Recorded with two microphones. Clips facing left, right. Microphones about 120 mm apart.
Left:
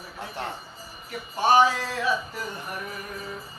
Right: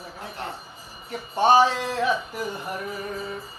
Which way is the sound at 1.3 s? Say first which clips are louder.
Right 2 dB; 25° right (ahead or behind).